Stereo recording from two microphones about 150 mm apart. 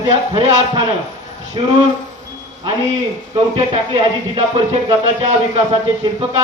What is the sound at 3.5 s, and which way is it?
Speech, 45° right (ahead or behind).